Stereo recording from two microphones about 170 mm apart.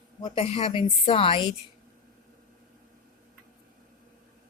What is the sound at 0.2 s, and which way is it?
A woman's voice, 30° left (ahead or behind).